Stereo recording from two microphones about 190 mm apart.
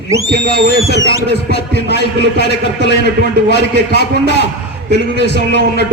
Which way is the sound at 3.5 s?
65° left (ahead or behind).